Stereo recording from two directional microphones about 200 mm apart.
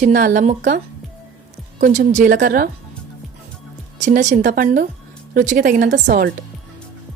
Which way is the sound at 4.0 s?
35° right (ahead or behind).